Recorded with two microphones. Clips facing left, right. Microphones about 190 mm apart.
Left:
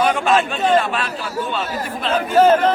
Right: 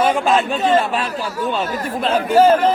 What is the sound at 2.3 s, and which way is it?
Speech, 10° right (ahead or behind).